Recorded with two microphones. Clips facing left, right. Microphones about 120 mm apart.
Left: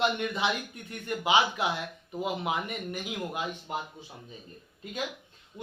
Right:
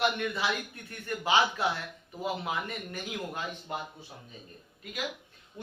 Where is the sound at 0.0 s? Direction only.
20° left (ahead or behind).